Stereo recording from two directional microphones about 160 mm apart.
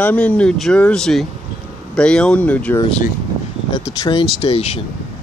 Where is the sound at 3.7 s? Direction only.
25° left (ahead or behind).